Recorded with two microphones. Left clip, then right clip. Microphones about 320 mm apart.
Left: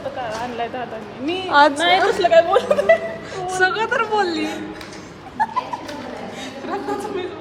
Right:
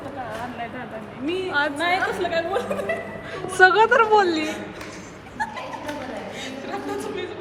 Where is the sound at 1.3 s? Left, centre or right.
Centre.